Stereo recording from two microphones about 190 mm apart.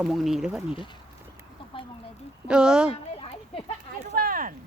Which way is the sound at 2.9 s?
30° left (ahead or behind).